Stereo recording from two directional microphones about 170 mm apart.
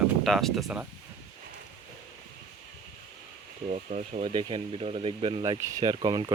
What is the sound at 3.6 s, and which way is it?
Speech, 45° right (ahead or behind).